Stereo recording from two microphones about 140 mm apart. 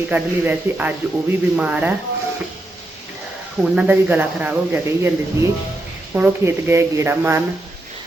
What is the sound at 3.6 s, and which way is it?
Speech, 10° right (ahead or behind).